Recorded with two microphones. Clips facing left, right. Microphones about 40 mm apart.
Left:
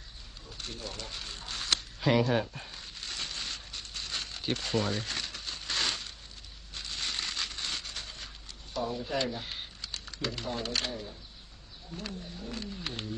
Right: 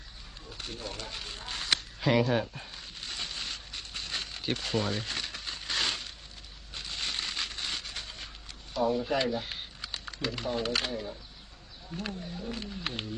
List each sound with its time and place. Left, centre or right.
0.5 s speech: centre
2.0 s a sound: centre
6.7 s crushing: centre
8.7 s a sound: centre
9.0 s speech: centre
9.8 s speech: centre